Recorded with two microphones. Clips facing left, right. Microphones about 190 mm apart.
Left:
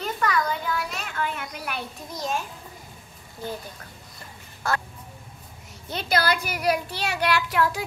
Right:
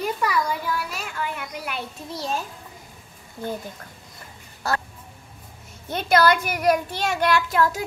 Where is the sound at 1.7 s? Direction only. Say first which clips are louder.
Right 2 dB; 30° right (ahead or behind).